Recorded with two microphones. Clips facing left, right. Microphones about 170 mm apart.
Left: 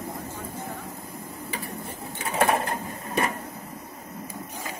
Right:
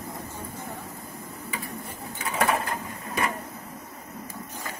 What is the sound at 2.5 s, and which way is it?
Bird, 30° left (ahead or behind).